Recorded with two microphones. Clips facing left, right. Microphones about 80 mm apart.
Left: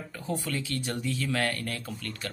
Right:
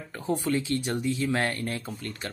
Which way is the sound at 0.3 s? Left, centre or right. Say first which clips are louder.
Right 6 dB; right.